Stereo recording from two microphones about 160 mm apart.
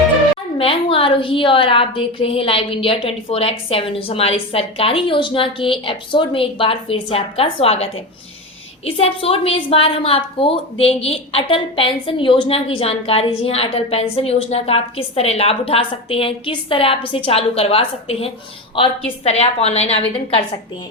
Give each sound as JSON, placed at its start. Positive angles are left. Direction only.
{"t": 0.6, "sound": "a woman's voice", "side_deg": 35}